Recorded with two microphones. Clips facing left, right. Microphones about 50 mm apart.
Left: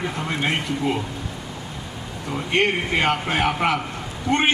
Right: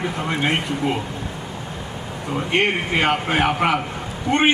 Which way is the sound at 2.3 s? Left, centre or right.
Centre.